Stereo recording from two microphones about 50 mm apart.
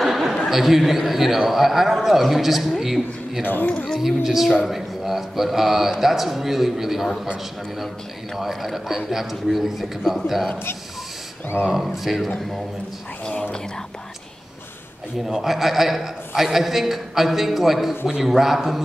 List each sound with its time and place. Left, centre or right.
0.0 s a sound: centre
0.5 s speech: centre
3.4 s speech: left
4.0 s speech: centre
8.4 s speech: centre
11.6 s speech: centre
13.2 s speech: centre
15.2 s speech: centre